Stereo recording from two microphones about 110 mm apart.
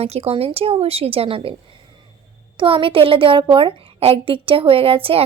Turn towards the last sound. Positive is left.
turn(degrees=-60)  # may be behind; listen again after turning